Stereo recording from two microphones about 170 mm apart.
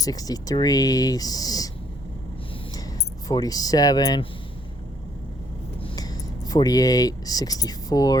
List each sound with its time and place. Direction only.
0.0 s speech: 20° left (ahead or behind)
3.2 s speech: 20° left (ahead or behind)
6.5 s speech: 20° left (ahead or behind)